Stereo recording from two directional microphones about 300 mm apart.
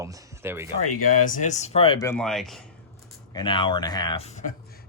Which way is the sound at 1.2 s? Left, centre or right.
Left.